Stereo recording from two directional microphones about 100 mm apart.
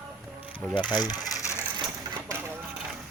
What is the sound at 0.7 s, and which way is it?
Speech, 50° left (ahead or behind).